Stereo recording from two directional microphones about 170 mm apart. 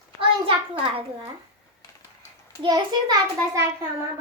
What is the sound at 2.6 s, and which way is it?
Child singing, 20° right (ahead or behind).